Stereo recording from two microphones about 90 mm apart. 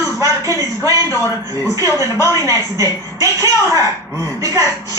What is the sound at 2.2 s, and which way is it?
A woman's voice, 35° right (ahead or behind).